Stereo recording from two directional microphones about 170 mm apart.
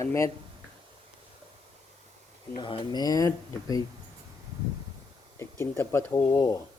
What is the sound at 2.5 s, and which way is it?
Speech, 30° left (ahead or behind).